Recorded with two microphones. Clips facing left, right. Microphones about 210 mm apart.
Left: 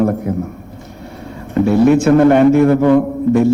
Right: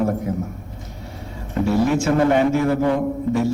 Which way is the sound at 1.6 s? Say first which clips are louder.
Left 8 dB; 60° left (ahead or behind).